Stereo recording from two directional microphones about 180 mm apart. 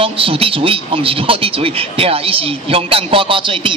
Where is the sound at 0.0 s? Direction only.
30° right (ahead or behind).